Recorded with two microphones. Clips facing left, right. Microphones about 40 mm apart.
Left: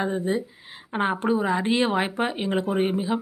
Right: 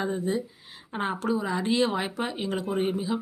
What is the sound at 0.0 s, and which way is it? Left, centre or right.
Speech, left.